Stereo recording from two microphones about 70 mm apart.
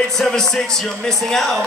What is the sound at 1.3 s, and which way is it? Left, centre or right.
Speech, centre.